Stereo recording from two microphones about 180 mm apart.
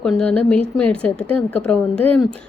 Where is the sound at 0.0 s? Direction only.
5° left (ahead or behind).